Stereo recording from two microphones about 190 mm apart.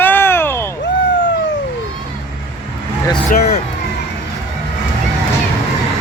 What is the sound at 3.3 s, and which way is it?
Speech, 50° left (ahead or behind).